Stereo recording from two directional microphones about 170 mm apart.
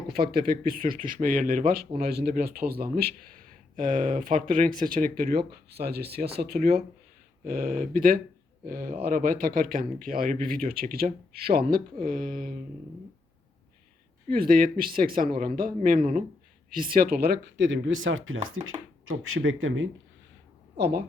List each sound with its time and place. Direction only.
0.3 s speech: 60° right (ahead or behind)
3.8 s speech: 50° right (ahead or behind)
14.3 s speech: 60° right (ahead or behind); by 17.9 s 90° right
19.4 s speech: 70° right (ahead or behind)
20.7 s a woman's voice: 85° right